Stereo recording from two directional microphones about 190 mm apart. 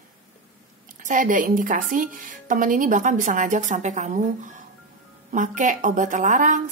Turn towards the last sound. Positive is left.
turn(degrees=-40)  # may be behind; listen again after turning